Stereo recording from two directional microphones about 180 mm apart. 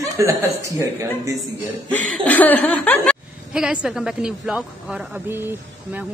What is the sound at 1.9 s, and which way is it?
Chuckle, 10° left (ahead or behind).